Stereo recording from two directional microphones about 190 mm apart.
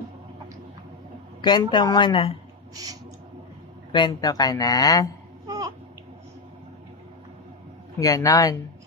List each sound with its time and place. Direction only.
1.4 s a man's voice: 20° left (ahead or behind)
2.7 s a sound: 20° right (ahead or behind)
3.9 s a man's voice: 20° left (ahead or behind)
8.0 s a man's voice: 20° left (ahead or behind)